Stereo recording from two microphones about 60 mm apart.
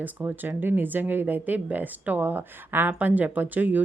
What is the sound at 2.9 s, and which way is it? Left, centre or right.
Speech, right.